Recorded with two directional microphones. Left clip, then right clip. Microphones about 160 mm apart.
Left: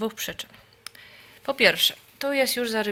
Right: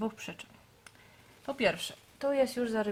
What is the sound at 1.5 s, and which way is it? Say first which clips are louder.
Speech: left 10 dB; 15° left (ahead or behind).